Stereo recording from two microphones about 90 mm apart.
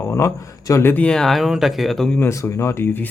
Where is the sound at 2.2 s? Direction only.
30° left (ahead or behind).